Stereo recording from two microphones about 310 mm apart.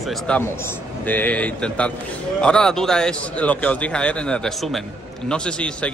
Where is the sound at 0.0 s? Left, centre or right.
Centre.